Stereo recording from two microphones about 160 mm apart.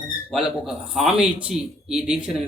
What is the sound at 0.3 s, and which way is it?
A man's voice, 5° right (ahead or behind).